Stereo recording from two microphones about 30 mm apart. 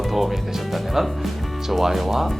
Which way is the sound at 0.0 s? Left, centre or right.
Centre.